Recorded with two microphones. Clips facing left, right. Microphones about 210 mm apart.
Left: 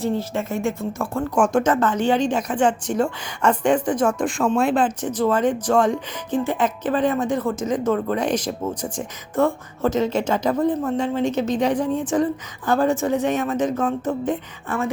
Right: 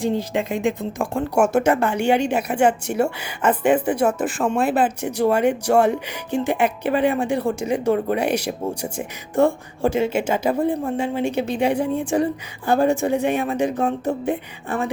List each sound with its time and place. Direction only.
0.0 s speech: 15° right (ahead or behind)